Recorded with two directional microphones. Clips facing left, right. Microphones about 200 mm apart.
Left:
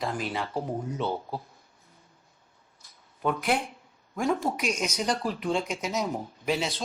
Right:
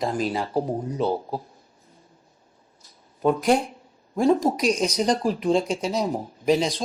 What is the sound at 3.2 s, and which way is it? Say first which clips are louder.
Speech: right 7 dB; 35° right (ahead or behind).